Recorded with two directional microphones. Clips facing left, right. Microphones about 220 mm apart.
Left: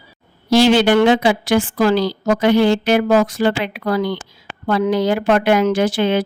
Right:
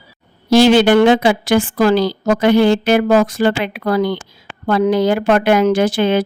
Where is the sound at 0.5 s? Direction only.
50° right (ahead or behind).